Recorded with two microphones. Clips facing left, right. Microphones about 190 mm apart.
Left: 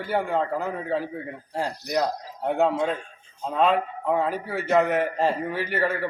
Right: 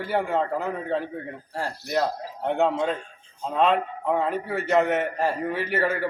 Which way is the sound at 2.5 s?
Centre (ahead or behind).